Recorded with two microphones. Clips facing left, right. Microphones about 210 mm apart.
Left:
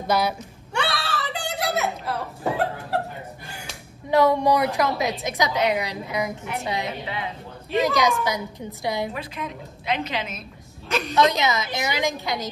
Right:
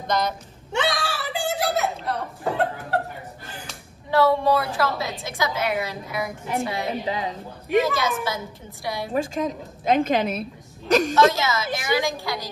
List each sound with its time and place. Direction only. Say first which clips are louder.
0.0 s a woman's voice: left 2 dB; 10° left (ahead or behind)
0.7 s a sound: right 2 dB; 15° right (ahead or behind); by 3.0 s centre (ahead or behind)
4.1 s a woman's voice: left 1 dB; 15° left (ahead or behind)
7.1 s speech: right 4 dB; 40° right (ahead or behind)
7.8 s a woman's voice: left 3 dB; 15° left (ahead or behind)
9.1 s a woman's voice: right 8 dB; 45° right (ahead or behind)
11.2 s a woman's voice: right 1 dB; 15° left (ahead or behind)